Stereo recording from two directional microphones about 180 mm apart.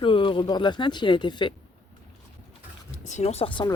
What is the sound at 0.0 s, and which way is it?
Speech, 30° left (ahead or behind).